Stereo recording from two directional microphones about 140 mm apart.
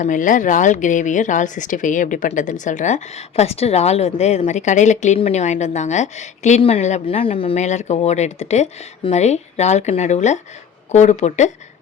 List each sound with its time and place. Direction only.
0.0 s speech: 70° left (ahead or behind)